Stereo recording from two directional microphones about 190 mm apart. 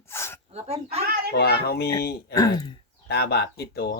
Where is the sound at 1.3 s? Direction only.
55° left (ahead or behind).